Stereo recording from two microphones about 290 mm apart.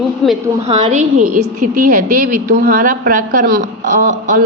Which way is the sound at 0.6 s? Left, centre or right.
Right.